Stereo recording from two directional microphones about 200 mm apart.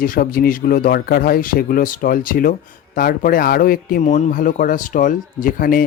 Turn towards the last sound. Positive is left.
turn(degrees=45)  # may be behind; listen again after turning